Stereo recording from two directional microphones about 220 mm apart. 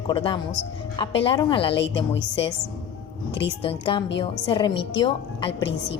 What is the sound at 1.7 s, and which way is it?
Speech, 55° left (ahead or behind).